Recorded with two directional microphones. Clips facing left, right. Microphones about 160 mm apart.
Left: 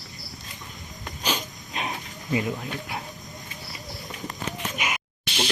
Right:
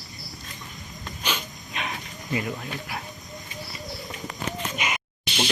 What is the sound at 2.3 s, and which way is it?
Speech, 20° left (ahead or behind).